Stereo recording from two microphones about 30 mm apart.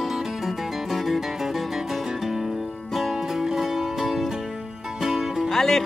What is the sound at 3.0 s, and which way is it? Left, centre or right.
Music, centre.